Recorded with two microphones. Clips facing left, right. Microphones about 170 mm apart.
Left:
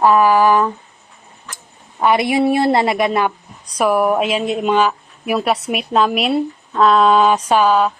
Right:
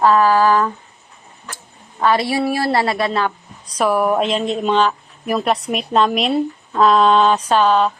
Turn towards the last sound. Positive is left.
turn(degrees=5)  # may be behind; listen again after turning